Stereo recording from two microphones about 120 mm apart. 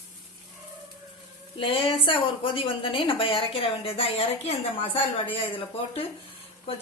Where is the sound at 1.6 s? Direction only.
45° left (ahead or behind).